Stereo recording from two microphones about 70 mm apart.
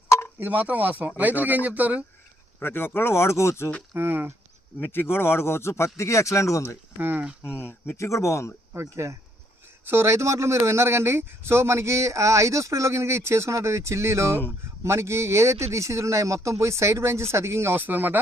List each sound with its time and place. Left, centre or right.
0.3 s speech: right
2.6 s speech: left
3.9 s speech: right
4.8 s speech: left
7.0 s speech: right
7.4 s speech: left
7.9 s speech: left
8.7 s speech: right